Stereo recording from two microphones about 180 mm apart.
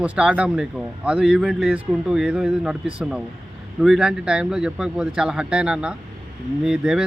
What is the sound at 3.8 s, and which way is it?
Speech, 5° right (ahead or behind).